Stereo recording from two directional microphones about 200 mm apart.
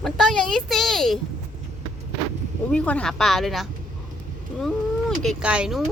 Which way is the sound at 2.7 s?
5° left (ahead or behind).